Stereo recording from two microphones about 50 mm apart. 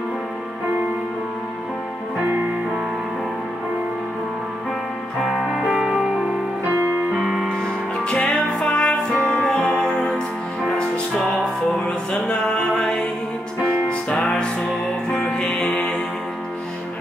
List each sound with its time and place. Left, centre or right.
5.5 s music: centre
7.2 s music: centre
7.4 s music: centre
11.2 s music: centre
11.8 s music: centre